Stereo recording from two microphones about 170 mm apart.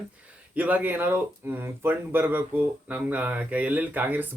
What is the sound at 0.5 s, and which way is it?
Speech, 10° right (ahead or behind).